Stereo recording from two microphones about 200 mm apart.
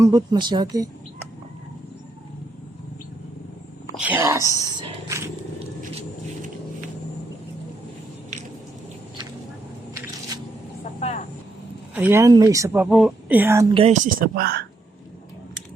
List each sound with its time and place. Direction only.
0.0 s speech: 20° right (ahead or behind)
3.9 s a sound: 10° right (ahead or behind)
4.7 s roaring cats: 20° right (ahead or behind)
5.5 s a sound: 30° right (ahead or behind)
11.9 s speech: 10° right (ahead or behind)
13.7 s speech: 35° right (ahead or behind); by 14.6 s 50° right (ahead or behind)